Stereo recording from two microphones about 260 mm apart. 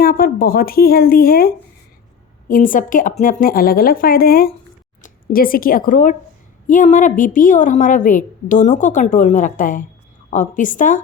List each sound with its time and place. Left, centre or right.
0.0 s a woman's voice: left